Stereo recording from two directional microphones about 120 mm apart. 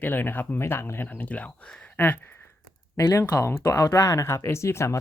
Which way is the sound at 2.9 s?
25° left (ahead or behind).